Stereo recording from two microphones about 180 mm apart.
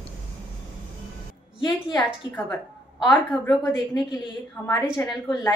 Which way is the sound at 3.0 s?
10° left (ahead or behind).